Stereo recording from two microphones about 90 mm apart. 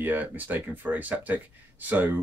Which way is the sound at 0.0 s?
20° right (ahead or behind).